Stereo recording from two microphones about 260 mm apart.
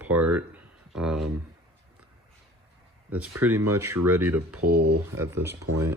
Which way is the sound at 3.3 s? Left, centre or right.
Centre.